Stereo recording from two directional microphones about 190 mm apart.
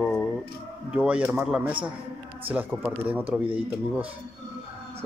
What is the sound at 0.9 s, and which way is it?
Speech, 5° right (ahead or behind).